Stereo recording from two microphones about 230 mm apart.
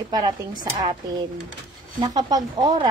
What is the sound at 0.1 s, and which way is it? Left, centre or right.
Speech, centre.